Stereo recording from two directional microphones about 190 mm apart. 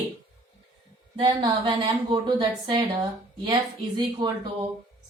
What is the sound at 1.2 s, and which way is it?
A woman's voice, 25° right (ahead or behind).